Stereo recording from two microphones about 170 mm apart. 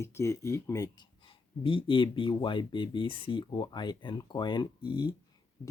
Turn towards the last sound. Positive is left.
turn(degrees=25)  # may be behind; listen again after turning